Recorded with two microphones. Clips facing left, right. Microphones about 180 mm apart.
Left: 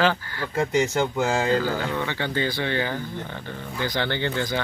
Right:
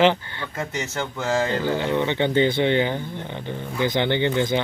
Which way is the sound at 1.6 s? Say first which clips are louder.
Right 4 dB; 20° right (ahead or behind).